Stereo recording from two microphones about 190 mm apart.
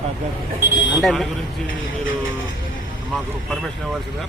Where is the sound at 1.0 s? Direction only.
Centre (ahead or behind).